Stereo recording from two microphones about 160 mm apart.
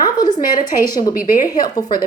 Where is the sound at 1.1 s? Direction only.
60° left (ahead or behind).